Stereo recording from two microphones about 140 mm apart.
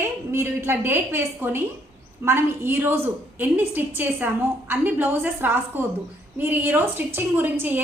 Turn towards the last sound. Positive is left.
turn(degrees=-15)  # may be behind; listen again after turning